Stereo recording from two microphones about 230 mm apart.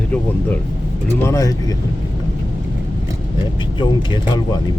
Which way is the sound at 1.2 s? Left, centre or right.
Centre.